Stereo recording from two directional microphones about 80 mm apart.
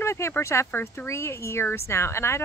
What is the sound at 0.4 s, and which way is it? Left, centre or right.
Speech, left.